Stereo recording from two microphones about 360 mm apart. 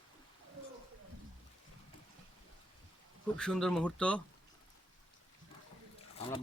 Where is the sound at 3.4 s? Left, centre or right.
Centre.